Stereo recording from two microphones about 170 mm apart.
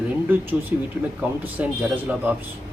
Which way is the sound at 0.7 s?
10° right (ahead or behind).